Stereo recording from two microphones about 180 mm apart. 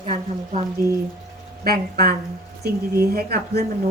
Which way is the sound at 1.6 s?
55° right (ahead or behind).